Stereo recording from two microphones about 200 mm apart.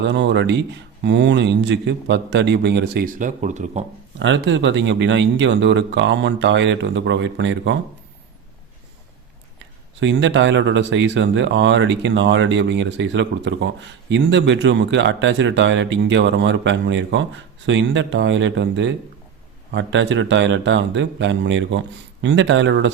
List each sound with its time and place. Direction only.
0.0 s speech: 60° right (ahead or behind); by 3.8 s 40° right (ahead or behind)
4.2 s speech: 65° right (ahead or behind)
10.0 s speech: 65° right (ahead or behind)